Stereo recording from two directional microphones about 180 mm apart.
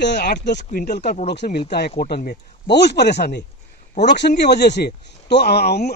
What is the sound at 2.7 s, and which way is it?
Speech, 70° left (ahead or behind).